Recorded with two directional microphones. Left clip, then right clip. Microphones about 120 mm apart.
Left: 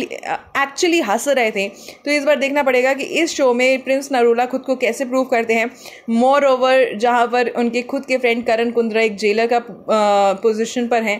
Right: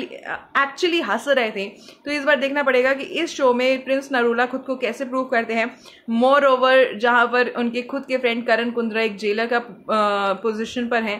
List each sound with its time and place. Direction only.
0.0 s a woman's voice: 40° left (ahead or behind)
6.1 s a woman's voice: 30° left (ahead or behind)